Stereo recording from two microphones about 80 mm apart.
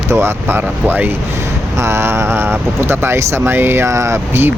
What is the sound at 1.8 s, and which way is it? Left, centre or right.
Speech, right.